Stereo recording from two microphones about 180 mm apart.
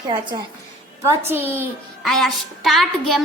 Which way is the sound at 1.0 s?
10° right (ahead or behind).